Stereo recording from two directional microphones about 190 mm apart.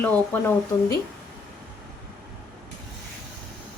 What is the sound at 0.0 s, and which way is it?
Speech, 10° left (ahead or behind).